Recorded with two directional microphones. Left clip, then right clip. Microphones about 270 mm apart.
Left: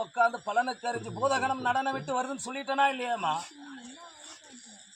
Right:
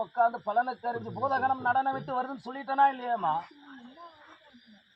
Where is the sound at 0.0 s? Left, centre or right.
Centre.